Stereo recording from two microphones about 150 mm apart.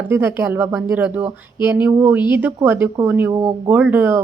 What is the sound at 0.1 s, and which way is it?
Speech, 15° right (ahead or behind).